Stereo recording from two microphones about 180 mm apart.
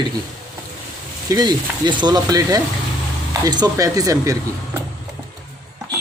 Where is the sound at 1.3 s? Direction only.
20° right (ahead or behind).